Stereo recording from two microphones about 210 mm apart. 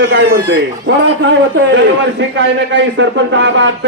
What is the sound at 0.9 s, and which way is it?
Speech, 60° right (ahead or behind).